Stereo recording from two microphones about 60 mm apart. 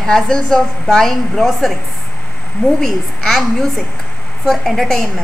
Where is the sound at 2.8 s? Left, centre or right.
Centre.